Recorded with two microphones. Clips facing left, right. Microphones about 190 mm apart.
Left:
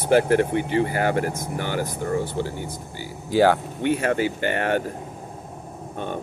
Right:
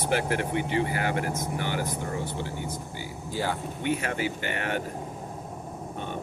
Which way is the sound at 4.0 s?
55° left (ahead or behind).